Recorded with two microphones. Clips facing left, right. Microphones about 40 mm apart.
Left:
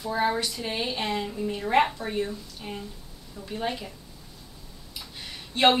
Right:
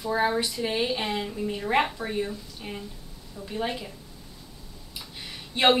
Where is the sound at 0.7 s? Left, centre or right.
Centre.